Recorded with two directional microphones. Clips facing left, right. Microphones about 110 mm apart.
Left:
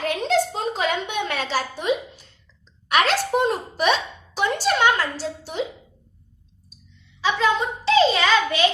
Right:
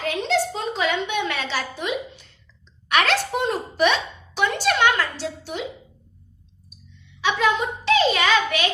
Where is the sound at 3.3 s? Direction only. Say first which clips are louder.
Left 3 dB; 40° left (ahead or behind).